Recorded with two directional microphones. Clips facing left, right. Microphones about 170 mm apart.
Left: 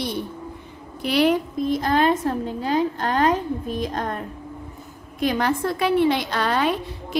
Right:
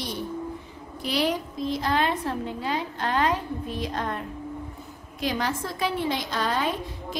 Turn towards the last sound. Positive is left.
turn(degrees=70)  # may be behind; listen again after turning